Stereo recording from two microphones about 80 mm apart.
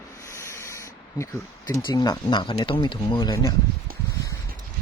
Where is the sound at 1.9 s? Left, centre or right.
Left.